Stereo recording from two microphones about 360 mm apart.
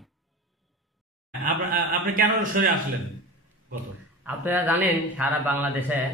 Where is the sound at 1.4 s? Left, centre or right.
Right.